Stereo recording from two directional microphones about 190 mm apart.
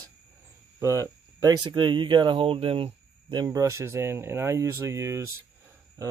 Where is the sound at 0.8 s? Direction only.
15° right (ahead or behind).